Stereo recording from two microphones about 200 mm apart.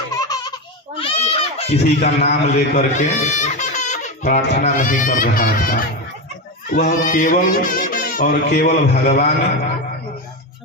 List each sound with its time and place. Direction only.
0.1 s baby laughter: 20° left (ahead or behind)
0.9 s a sound: 25° left (ahead or behind)
4.4 s speech: 40° left (ahead or behind)
6.8 s speech: 45° left (ahead or behind)